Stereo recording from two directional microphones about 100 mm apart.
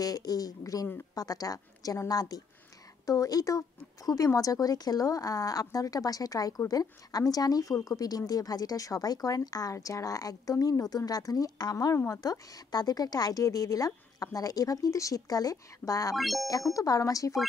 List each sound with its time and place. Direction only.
0.0 s a woman's voice: 40° left (ahead or behind)
16.2 s speech: centre (ahead or behind)
16.7 s a woman's voice: 35° left (ahead or behind)